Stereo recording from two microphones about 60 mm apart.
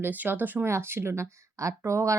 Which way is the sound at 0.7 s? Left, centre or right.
Right.